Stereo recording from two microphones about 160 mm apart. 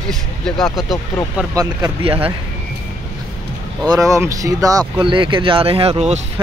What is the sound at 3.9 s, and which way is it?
Speech, 20° right (ahead or behind).